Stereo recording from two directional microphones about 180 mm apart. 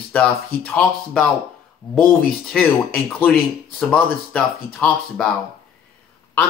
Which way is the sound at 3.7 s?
5° left (ahead or behind).